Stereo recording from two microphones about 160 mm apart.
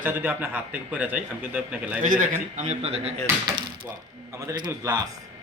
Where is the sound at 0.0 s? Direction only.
10° right (ahead or behind).